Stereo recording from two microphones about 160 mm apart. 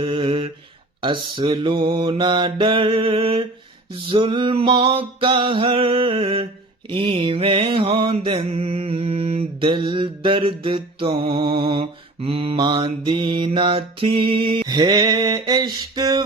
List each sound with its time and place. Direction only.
0.0 s mantra: 35° right (ahead or behind)
1.0 s music: 30° right (ahead or behind)